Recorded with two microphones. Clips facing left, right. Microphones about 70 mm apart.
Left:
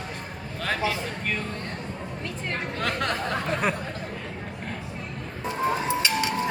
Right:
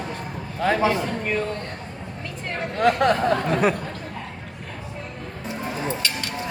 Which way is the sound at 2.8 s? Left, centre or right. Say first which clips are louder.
Right 11 dB; centre.